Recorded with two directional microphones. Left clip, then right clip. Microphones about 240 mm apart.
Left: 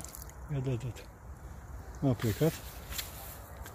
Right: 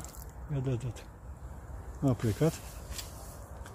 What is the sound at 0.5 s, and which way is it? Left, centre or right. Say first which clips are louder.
Speech: right 1 dB; centre.